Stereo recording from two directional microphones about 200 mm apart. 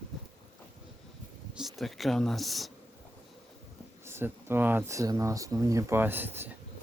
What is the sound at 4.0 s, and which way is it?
Speech, 10° right (ahead or behind).